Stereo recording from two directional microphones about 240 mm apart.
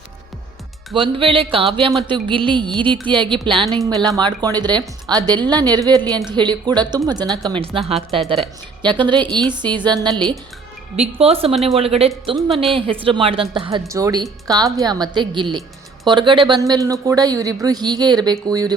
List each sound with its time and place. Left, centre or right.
0.9 s speech: right